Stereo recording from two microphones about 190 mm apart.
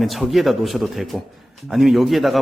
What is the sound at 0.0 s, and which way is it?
A man's voice, centre (ahead or behind).